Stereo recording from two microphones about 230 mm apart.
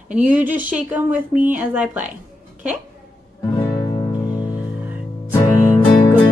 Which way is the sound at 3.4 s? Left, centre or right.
Centre.